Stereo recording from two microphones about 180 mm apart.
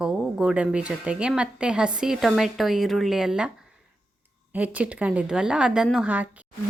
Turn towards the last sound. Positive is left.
turn(degrees=-10)  # may be behind; listen again after turning